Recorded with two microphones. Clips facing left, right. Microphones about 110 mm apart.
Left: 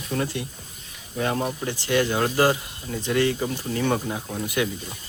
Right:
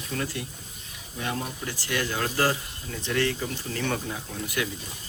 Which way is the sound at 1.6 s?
25° left (ahead or behind).